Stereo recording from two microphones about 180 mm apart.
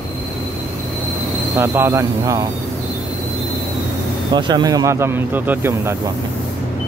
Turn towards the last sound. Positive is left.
turn(degrees=-10)  # may be behind; listen again after turning